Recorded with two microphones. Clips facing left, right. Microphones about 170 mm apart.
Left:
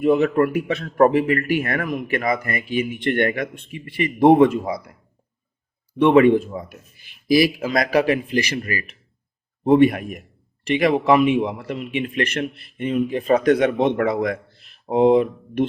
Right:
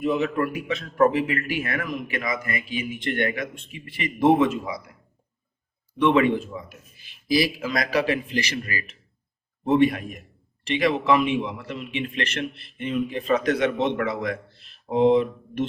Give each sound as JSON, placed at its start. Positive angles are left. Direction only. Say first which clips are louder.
{"t": 0.0, "sound": "speech", "louder": "left 7 dB", "side_deg": 60}
{"t": 2.4, "sound": "speech", "louder": "left 3 dB", "side_deg": 35}
{"t": 2.6, "sound": "speech", "louder": "left 9 dB", "side_deg": 60}
{"t": 4.6, "sound": "speech", "louder": "left 6 dB", "side_deg": 40}
{"t": 6.1, "sound": "speech", "louder": "left 7 dB", "side_deg": 45}
{"t": 6.7, "sound": "a man's voice", "louder": "left 4 dB", "side_deg": 55}
{"t": 9.6, "sound": "speech", "louder": "left 5 dB", "side_deg": 50}
{"t": 13.6, "sound": "speech", "louder": "left 5 dB", "side_deg": 55}